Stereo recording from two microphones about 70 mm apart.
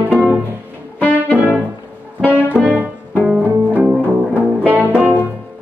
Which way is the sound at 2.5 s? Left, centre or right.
Centre.